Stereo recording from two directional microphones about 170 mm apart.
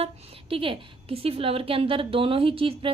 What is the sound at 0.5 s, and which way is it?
A woman's voice, 30° right (ahead or behind).